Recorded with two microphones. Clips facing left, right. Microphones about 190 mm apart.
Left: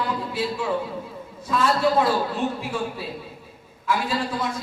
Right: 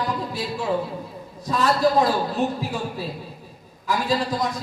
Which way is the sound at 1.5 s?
40° right (ahead or behind).